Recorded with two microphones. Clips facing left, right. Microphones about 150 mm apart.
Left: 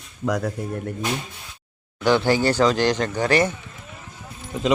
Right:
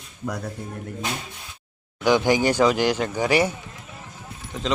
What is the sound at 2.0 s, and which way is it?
Speech, 15° right (ahead or behind).